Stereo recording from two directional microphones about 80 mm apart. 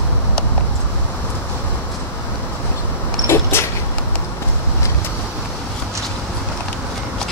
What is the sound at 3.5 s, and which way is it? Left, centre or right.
Vehicle, left.